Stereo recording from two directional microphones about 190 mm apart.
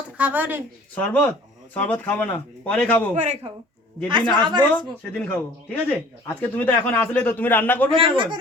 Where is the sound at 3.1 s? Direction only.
35° right (ahead or behind).